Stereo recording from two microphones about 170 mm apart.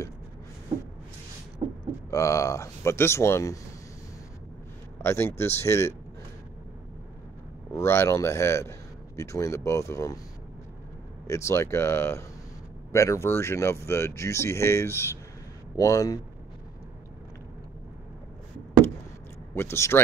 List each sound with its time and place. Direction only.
1.6 s a sound: 30° right (ahead or behind)
2.0 s a man's voice: 20° left (ahead or behind)
5.0 s a man's voice: 15° left (ahead or behind)
7.7 s a man's voice: 15° left (ahead or behind)
11.2 s a man's voice: 15° left (ahead or behind)
19.5 s a man's voice: 15° left (ahead or behind)